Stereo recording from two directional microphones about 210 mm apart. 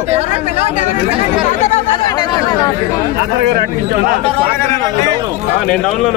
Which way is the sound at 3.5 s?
45° right (ahead or behind).